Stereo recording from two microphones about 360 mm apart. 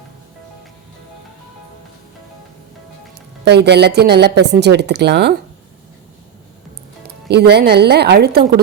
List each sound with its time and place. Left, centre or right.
3.4 s a woman's voice: right
7.3 s a woman's voice: right